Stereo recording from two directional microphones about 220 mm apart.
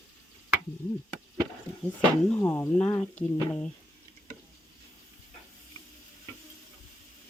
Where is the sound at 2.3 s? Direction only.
10° left (ahead or behind).